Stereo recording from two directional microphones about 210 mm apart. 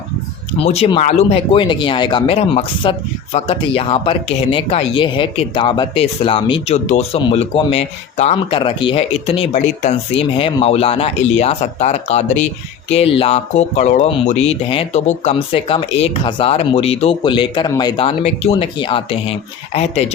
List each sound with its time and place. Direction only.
0.6 s speech: 30° left (ahead or behind)